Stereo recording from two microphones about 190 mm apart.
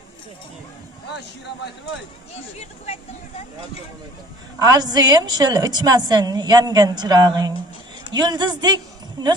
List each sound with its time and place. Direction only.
4.6 s a woman's voice: 20° right (ahead or behind)